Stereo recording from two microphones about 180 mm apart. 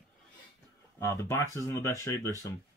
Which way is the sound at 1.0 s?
15° left (ahead or behind).